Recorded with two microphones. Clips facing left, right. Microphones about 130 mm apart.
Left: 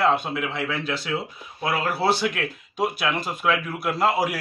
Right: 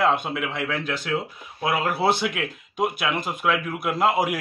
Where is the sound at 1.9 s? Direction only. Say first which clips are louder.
Even; 20° right (ahead or behind).